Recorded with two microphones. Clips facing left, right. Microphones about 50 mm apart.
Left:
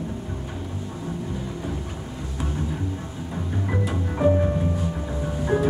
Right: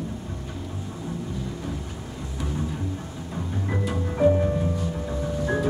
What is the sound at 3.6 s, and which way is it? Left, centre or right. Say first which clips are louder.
Music: even; centre.